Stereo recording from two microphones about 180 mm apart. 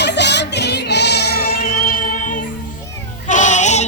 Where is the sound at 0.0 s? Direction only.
70° left (ahead or behind); by 2.4 s 45° left (ahead or behind).